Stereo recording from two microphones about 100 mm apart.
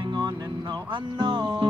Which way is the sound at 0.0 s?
50° right (ahead or behind).